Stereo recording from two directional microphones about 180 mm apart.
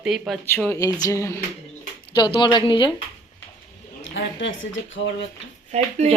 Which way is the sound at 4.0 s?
90° left.